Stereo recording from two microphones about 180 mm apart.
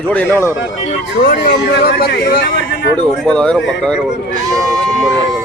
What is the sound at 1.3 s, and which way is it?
Speech, 70° left (ahead or behind).